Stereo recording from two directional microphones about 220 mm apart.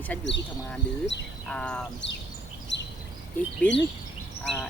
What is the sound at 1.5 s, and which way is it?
Speech, 5° left (ahead or behind).